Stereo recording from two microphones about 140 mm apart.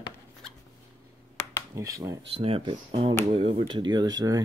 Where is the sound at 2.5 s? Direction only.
40° right (ahead or behind).